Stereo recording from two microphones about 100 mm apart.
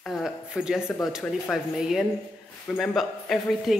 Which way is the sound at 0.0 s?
Centre (ahead or behind).